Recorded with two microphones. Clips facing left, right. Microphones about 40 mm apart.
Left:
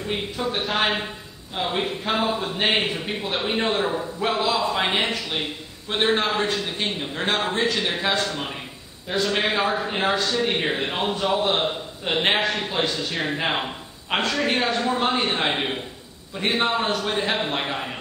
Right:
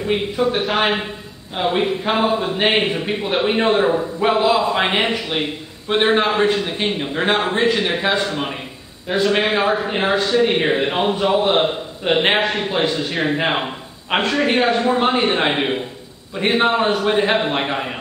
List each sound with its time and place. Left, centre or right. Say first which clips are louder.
0.0 s speech: right 8 dB; centre
0.6 s speech: right 1 dB; centre
1.5 s a man's voice: right 6 dB; centre